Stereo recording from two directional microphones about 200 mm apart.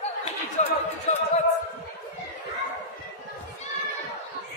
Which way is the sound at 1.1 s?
35° left (ahead or behind).